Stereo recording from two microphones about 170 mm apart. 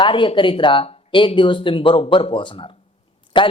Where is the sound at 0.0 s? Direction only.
30° left (ahead or behind).